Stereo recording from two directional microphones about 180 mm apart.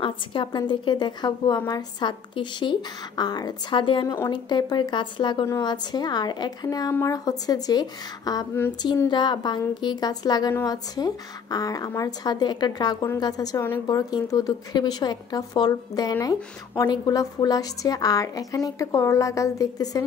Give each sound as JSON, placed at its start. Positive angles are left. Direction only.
{"t": 0.0, "sound": "speech", "side_deg": 25}